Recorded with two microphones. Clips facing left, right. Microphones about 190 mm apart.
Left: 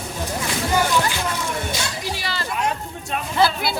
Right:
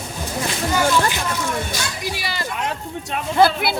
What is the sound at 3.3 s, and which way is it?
Speech, 55° right (ahead or behind).